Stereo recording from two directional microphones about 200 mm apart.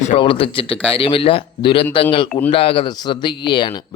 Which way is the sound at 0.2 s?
25° left (ahead or behind).